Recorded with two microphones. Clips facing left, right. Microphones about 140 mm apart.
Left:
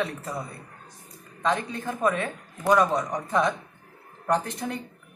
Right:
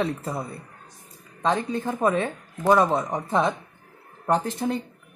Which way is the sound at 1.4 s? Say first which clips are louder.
Right 3 dB; 30° right (ahead or behind).